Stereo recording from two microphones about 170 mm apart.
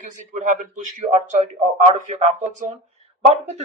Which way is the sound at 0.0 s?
50° right (ahead or behind).